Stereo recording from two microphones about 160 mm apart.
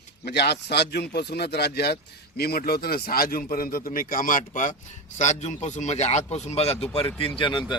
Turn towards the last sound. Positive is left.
turn(degrees=30)  # may be behind; listen again after turning